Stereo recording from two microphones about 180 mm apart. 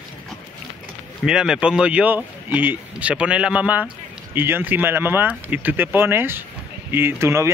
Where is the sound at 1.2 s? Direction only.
5° right (ahead or behind).